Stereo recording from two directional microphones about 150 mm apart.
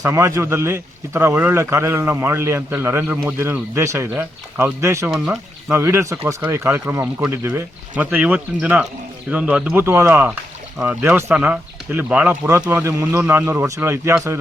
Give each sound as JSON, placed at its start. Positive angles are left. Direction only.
{"t": 0.0, "sound": "a man's voice", "side_deg": -20}